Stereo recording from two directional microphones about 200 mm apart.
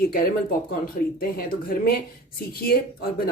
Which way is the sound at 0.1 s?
45° left (ahead or behind).